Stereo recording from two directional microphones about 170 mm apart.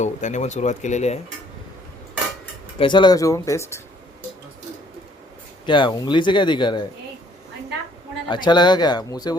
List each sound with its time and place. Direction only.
0.0 s speech: 45° left (ahead or behind)
2.7 s speech: 30° left (ahead or behind)
5.6 s speech: 30° left (ahead or behind)
8.3 s speech: 25° left (ahead or behind)